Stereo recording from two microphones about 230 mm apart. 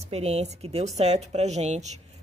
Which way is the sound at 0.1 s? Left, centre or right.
Right.